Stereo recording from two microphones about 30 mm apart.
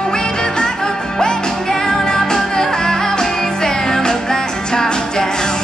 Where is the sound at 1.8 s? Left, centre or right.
Centre.